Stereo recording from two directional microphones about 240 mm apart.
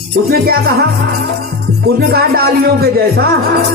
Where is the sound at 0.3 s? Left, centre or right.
Right.